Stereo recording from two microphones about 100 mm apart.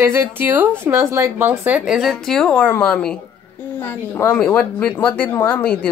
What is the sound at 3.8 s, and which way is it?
Speech, 25° left (ahead or behind).